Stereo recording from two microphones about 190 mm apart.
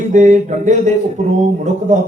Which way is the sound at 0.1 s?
40° right (ahead or behind).